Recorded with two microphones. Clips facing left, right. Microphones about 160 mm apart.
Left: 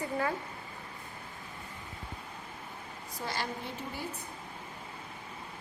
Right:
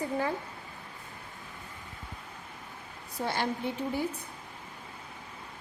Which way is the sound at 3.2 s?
55° right (ahead or behind).